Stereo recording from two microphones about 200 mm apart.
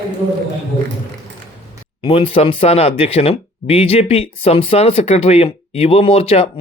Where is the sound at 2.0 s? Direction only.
30° left (ahead or behind).